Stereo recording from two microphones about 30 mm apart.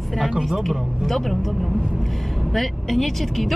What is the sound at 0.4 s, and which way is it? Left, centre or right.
Speech, centre.